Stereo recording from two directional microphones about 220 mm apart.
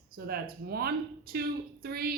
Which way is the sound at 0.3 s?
45° right (ahead or behind).